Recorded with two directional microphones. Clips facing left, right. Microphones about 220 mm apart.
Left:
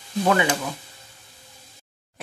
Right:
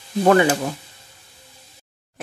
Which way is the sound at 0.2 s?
45° right (ahead or behind).